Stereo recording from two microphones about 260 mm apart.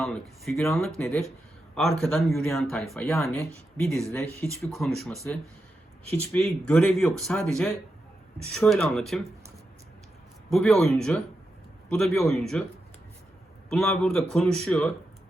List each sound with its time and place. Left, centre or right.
0.0 s speech: centre
10.5 s speech: centre
13.7 s speech: centre